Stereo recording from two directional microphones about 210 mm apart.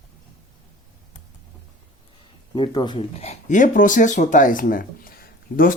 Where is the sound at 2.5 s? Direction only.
20° left (ahead or behind).